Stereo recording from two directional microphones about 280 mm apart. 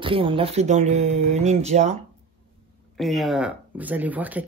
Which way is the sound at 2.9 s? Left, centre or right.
Centre.